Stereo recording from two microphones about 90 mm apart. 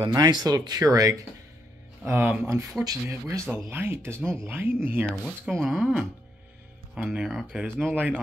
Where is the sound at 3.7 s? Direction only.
25° right (ahead or behind).